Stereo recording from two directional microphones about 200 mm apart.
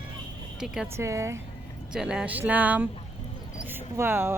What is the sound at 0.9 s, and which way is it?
Speech, 15° right (ahead or behind).